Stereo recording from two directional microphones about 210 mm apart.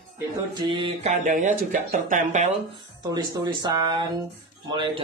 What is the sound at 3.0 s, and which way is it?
Speech, 20° right (ahead or behind).